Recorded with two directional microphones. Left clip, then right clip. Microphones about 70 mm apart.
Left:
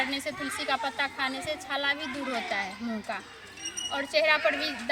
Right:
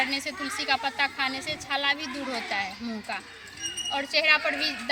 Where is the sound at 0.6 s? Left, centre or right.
Left.